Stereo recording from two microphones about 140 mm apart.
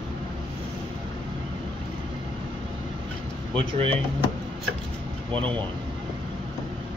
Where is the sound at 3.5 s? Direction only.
40° right (ahead or behind).